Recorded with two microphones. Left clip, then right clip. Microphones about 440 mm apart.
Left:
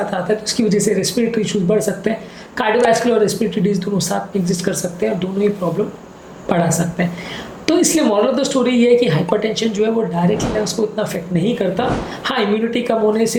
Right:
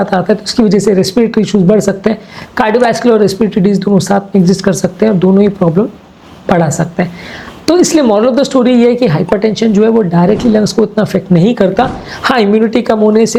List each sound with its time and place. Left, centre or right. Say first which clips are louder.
0.1 s speech: right 7 dB; right
6.5 s speech: right 6 dB; right